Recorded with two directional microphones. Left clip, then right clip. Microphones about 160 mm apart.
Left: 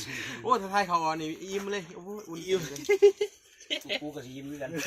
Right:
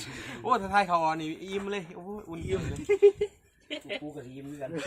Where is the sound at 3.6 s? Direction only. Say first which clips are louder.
Left 4 dB; 75° left (ahead or behind).